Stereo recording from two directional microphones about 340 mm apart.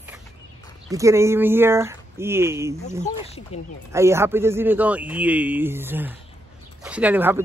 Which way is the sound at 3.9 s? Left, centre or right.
Centre.